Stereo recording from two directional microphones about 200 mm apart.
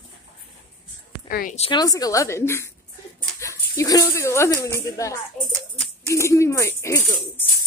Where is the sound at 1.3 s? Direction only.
45° left (ahead or behind).